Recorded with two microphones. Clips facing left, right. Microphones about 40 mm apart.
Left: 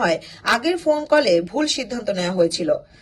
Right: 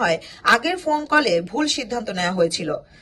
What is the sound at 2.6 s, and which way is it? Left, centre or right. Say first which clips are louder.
Speech: left 6 dB; right.